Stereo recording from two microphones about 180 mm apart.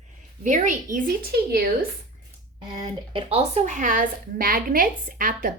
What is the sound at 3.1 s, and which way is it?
A woman's voice, 35° right (ahead or behind).